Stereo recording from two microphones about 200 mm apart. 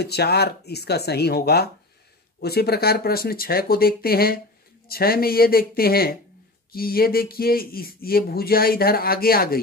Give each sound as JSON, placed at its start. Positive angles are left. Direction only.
{"t": 0.0, "sound": "speech", "side_deg": 55}